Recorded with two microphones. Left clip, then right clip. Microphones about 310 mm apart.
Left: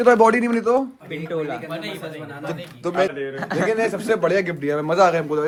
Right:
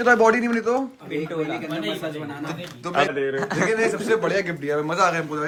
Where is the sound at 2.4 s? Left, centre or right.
Centre.